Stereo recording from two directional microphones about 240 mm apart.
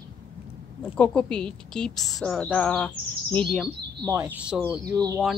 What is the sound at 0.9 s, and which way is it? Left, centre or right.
A woman's voice, centre.